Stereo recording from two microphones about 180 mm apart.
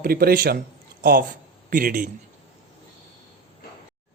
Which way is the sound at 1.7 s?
50° right (ahead or behind).